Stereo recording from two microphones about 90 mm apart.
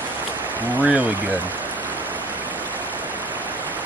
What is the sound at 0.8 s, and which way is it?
Speech, 15° right (ahead or behind).